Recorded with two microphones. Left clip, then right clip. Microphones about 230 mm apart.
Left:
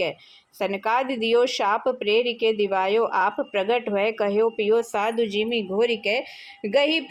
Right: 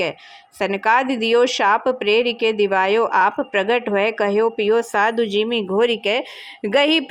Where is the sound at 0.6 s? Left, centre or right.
Right.